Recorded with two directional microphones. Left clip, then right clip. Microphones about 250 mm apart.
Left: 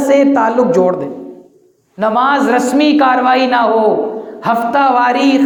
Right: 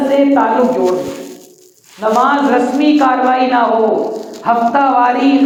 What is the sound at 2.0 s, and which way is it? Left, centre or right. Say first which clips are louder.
Speech: even; left.